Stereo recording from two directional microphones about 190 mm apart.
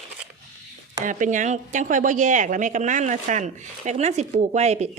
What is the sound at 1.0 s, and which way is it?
A woman's voice, 40° right (ahead or behind).